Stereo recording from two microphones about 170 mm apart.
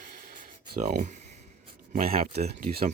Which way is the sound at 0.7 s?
50° right (ahead or behind).